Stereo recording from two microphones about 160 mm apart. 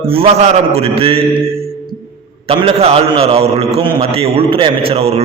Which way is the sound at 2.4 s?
40° right (ahead or behind).